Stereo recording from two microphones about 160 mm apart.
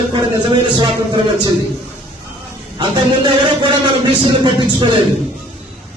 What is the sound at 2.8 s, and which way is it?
A man's voice, 30° right (ahead or behind).